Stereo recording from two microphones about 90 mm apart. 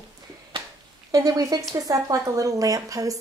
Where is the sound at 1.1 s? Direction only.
40° right (ahead or behind).